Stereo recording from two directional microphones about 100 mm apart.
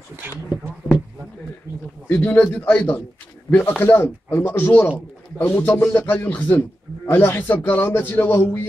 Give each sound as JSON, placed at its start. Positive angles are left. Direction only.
{"t": 0.1, "sound": "speech", "side_deg": -25}
{"t": 2.0, "sound": "a man's voice", "side_deg": 15}